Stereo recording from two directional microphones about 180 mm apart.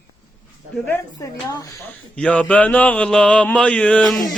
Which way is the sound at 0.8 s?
15° left (ahead or behind).